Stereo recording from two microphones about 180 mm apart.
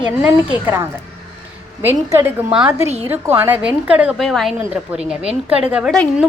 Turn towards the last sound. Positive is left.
turn(degrees=-5)  # may be behind; listen again after turning